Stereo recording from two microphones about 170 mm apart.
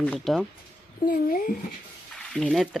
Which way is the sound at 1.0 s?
60° left (ahead or behind).